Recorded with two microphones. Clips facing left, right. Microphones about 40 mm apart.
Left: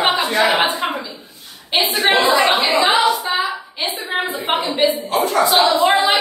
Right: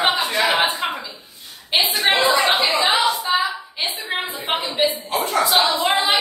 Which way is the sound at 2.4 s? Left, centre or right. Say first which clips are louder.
Left 3 dB; left.